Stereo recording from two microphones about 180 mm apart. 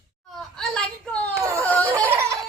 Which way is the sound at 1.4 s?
15° right (ahead or behind).